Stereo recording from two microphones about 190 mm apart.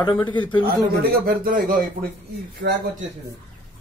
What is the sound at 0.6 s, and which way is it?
Speech, 55° right (ahead or behind).